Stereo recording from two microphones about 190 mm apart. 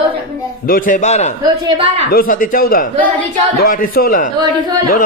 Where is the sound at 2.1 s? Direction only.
50° left (ahead or behind).